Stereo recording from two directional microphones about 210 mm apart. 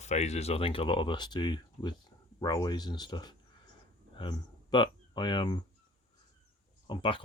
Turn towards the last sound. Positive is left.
turn(degrees=25)  # may be behind; listen again after turning